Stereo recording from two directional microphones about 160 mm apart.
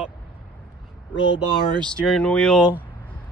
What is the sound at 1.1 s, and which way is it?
Speech, 25° left (ahead or behind).